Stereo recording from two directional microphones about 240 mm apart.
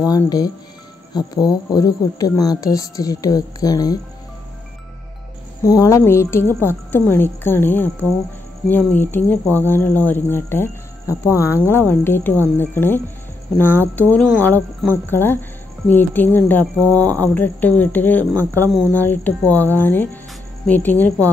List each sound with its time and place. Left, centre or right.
0.1 s speech: centre
5.6 s speech: centre